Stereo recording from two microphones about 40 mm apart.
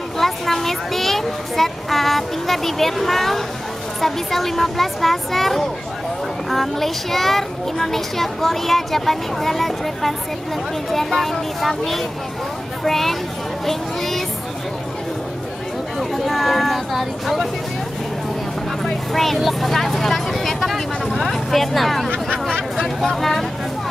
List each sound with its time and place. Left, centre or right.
0.2 s speech: centre
13.7 s a sound: centre
16.0 s speech: centre
18.9 s speech: centre
22.5 s speech: left
22.9 s speech: centre